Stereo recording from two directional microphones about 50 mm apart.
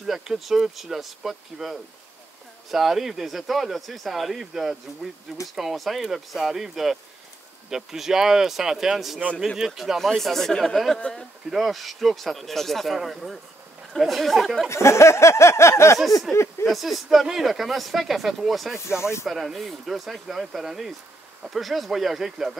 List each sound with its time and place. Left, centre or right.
0.0 s speech: centre
9.9 s speech: centre
11.5 s speech: centre
14.7 s a sound: left
16.0 s speech: centre
18.8 s speech: left
19.2 s speech: centre